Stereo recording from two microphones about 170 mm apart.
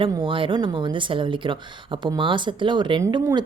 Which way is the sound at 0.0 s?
30° right (ahead or behind).